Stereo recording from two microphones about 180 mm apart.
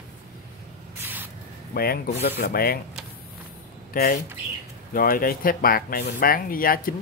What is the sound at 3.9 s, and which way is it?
Speech, 55° left (ahead or behind).